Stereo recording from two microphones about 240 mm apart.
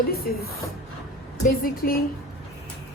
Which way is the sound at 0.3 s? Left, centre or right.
Left.